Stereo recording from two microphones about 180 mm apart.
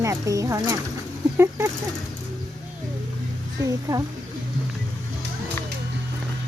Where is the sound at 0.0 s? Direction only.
15° right (ahead or behind).